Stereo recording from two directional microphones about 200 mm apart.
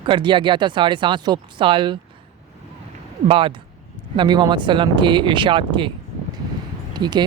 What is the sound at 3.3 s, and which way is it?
Speech, 25° right (ahead or behind).